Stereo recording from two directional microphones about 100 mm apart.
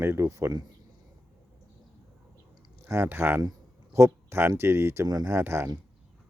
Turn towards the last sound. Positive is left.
turn(degrees=-25)  # may be behind; listen again after turning